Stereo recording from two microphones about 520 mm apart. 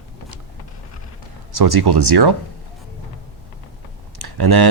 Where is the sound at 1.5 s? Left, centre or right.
Right.